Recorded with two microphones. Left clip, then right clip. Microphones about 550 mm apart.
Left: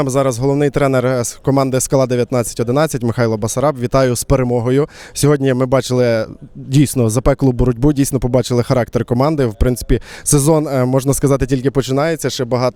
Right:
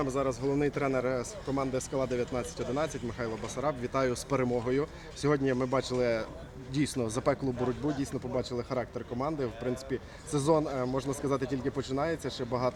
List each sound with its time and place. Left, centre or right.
0.0 s speech: left